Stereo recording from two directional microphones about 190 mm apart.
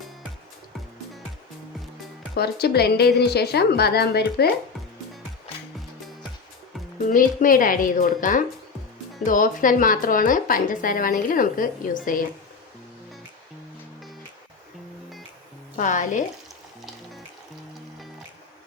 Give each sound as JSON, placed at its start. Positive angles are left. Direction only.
{"t": 2.3, "sound": "a woman's voice", "side_deg": 55}
{"t": 7.1, "sound": "speech", "side_deg": 45}
{"t": 15.7, "sound": "a woman's voice", "side_deg": 40}